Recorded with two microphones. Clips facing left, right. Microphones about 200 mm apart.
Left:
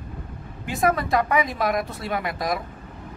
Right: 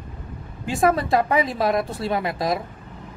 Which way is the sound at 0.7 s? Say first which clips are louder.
Right 3 dB; 30° right (ahead or behind).